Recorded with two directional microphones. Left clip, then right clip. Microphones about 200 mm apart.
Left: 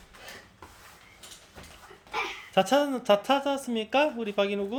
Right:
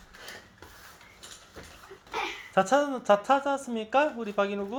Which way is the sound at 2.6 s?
20° left (ahead or behind).